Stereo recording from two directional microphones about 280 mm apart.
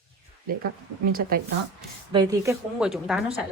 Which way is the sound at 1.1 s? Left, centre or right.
Right.